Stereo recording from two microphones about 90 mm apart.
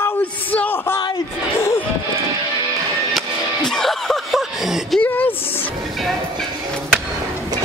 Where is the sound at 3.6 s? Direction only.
5° left (ahead or behind).